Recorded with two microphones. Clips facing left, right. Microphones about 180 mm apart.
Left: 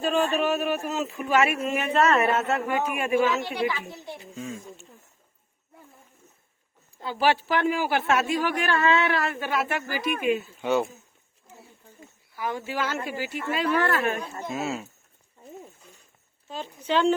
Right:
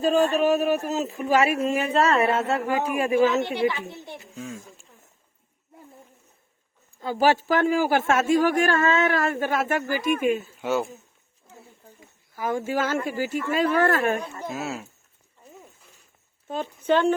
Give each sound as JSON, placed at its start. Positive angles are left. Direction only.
{"t": 0.0, "sound": "speech", "side_deg": -40}
{"t": 3.5, "sound": "a child's voice", "side_deg": -25}
{"t": 4.4, "sound": "a sound", "side_deg": 0}
{"t": 7.0, "sound": "speech", "side_deg": -45}
{"t": 10.6, "sound": "speech", "side_deg": 0}
{"t": 12.4, "sound": "speech", "side_deg": -45}
{"t": 14.4, "sound": "speech", "side_deg": 0}
{"t": 16.5, "sound": "speech", "side_deg": -50}